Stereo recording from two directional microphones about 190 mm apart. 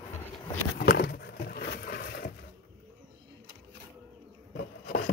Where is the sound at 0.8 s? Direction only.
55° left (ahead or behind).